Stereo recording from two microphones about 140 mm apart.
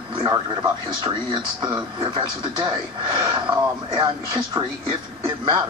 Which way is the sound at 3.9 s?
35° right (ahead or behind).